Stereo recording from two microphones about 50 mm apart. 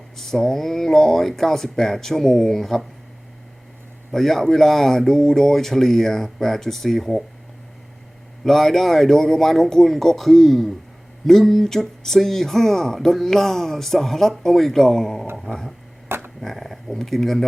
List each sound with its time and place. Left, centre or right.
0.2 s speech: centre
4.1 s speech: centre
8.4 s speech: centre
16.0 s a sound: right
16.4 s speech: centre